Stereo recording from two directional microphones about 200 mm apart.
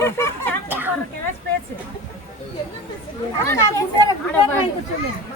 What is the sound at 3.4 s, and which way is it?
Speech, 15° left (ahead or behind).